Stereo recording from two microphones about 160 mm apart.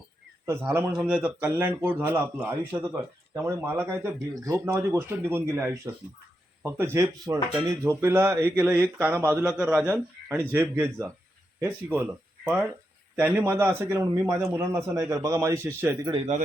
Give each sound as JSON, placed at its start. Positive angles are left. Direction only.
{"t": 0.4, "sound": "speech", "side_deg": -15}
{"t": 16.1, "sound": "a man's voice", "side_deg": -40}